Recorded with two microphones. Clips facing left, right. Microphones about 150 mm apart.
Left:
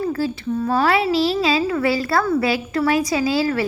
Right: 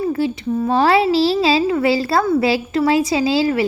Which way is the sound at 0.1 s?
20° right (ahead or behind).